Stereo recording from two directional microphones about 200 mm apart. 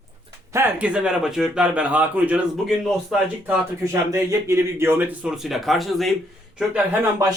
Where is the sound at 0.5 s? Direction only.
10° right (ahead or behind).